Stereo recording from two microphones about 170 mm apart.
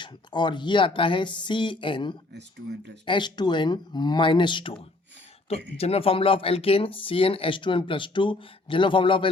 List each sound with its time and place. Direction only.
0.0 s speech: 25° left (ahead or behind)
2.3 s speech: 90° right
3.1 s speech: 25° left (ahead or behind)